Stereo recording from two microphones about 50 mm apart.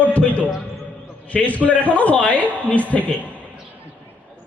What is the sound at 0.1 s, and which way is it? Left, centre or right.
Music, left.